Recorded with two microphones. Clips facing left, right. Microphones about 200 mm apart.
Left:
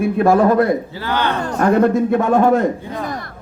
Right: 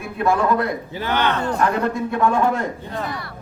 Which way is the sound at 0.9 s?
20° right (ahead or behind).